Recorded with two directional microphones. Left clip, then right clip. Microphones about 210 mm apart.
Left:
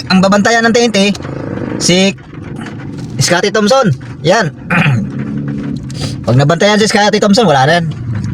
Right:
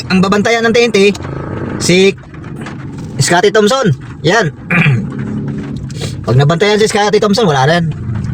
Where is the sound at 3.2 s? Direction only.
5° left (ahead or behind).